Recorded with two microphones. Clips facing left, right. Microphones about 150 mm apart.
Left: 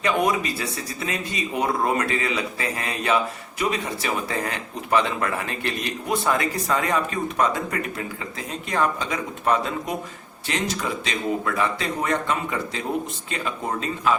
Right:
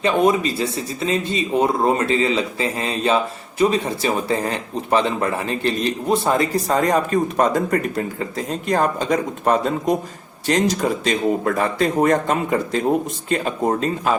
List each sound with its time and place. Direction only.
0.0 s a man's voice: 25° right (ahead or behind); by 14.1 s 45° right (ahead or behind)